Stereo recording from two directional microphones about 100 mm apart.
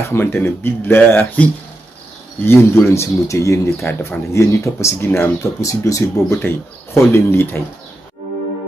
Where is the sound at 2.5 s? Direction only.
25° left (ahead or behind).